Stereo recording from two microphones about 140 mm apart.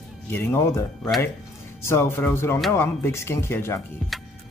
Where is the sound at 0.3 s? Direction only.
15° left (ahead or behind).